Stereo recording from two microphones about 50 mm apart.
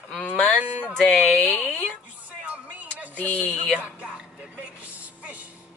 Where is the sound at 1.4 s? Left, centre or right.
Left.